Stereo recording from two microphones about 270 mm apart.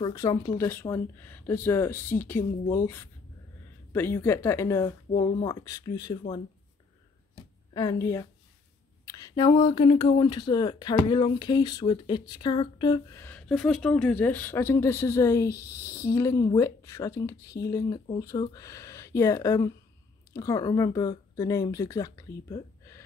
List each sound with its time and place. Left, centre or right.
0.0 s speech: centre
7.7 s speech: centre